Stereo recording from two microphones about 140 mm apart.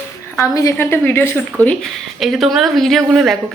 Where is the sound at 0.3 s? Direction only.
20° left (ahead or behind).